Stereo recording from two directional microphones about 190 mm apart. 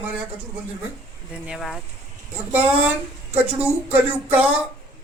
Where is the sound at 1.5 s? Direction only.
Centre (ahead or behind).